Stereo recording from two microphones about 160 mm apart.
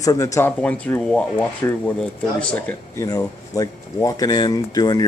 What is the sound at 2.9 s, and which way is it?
Speech, 20° left (ahead or behind).